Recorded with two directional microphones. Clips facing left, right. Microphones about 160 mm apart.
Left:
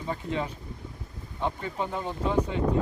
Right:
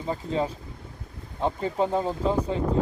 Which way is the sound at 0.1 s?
30° right (ahead or behind).